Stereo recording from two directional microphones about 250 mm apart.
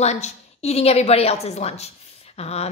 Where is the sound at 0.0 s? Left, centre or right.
Left.